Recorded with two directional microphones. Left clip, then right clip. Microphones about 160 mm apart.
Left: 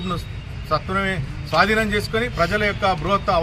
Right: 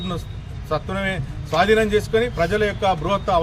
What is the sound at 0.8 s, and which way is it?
A man's voice, 20° right (ahead or behind).